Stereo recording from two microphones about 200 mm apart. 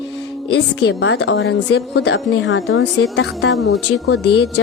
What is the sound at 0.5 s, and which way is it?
A woman's voice, 60° left (ahead or behind).